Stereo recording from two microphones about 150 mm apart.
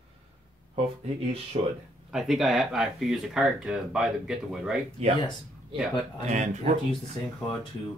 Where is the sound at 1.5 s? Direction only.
45° right (ahead or behind).